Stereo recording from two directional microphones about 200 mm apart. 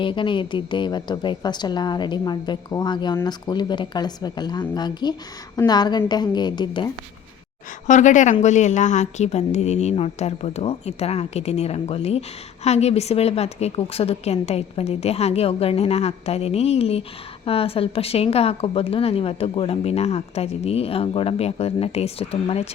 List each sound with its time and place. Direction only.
0.0 s a woman's voice: 25° left (ahead or behind)
7.9 s a woman's voice: 35° left (ahead or behind)